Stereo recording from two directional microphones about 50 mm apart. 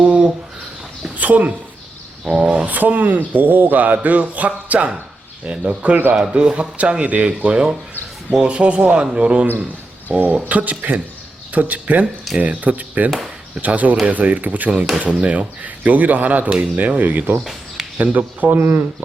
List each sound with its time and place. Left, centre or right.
0.0 s a sound: right
2.2 s speech: centre
2.6 s speech: right
6.1 s speech: centre
10.1 s speech: right
17.4 s a sound: centre
17.9 s speech: right